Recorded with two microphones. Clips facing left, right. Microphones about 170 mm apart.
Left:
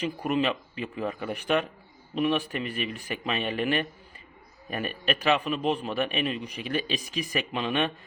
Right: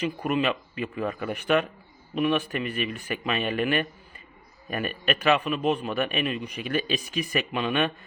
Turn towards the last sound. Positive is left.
turn(degrees=35)  # may be behind; listen again after turning